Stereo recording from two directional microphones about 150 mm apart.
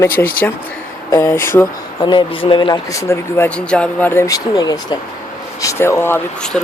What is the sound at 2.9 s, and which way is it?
Speech, 15° left (ahead or behind).